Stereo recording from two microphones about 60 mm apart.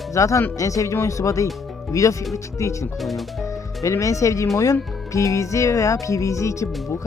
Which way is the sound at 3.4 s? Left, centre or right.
Left.